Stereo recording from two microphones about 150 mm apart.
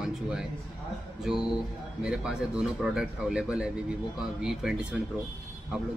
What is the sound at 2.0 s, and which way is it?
A man's voice, 5° right (ahead or behind).